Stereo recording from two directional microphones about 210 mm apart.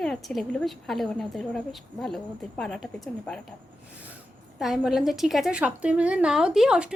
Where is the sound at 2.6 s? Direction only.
Centre (ahead or behind).